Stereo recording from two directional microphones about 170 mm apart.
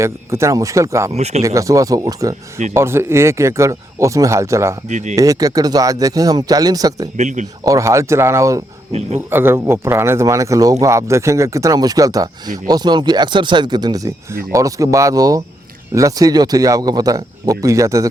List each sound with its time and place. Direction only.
0.0 s speech: 15° right (ahead or behind)
1.1 s speech: 40° right (ahead or behind)
1.4 s speech: 20° right (ahead or behind)
4.9 s speech: 45° right (ahead or behind)
5.1 s speech: 20° right (ahead or behind)
7.2 s speech: 45° right (ahead or behind)
7.6 s speech: 20° right (ahead or behind)
8.9 s speech: 40° right (ahead or behind)
9.3 s speech: 15° right (ahead or behind)